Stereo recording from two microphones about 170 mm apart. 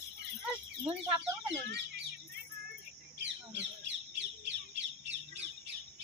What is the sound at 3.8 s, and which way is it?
Bird, 90° right.